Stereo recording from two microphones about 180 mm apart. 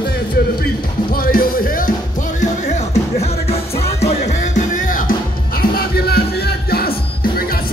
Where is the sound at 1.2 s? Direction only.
55° left (ahead or behind).